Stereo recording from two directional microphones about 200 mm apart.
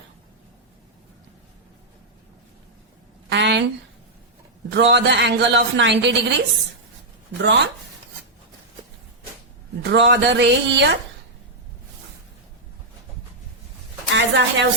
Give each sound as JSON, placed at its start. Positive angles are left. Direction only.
{"t": 3.2, "sound": "a sound", "side_deg": -60}
{"t": 4.7, "sound": "a man's voice", "side_deg": -60}
{"t": 7.4, "sound": "a man's voice", "side_deg": -60}
{"t": 9.8, "sound": "a man's voice", "side_deg": -60}
{"t": 14.1, "sound": "a woman's voice", "side_deg": -65}